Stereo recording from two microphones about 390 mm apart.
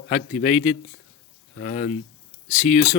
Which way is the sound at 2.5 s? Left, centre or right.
Centre.